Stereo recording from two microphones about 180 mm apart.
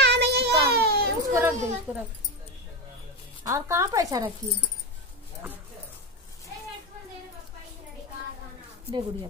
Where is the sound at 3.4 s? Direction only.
15° right (ahead or behind).